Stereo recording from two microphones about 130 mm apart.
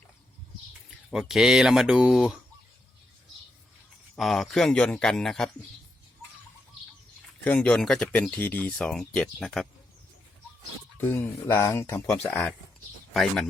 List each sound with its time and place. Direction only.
0.9 s speech: centre (ahead or behind)
4.1 s speech: centre (ahead or behind)
7.4 s speech: 10° left (ahead or behind)
8.0 s speech: 15° left (ahead or behind)
10.9 s speech: 15° left (ahead or behind)
12.2 s speech: 5° left (ahead or behind)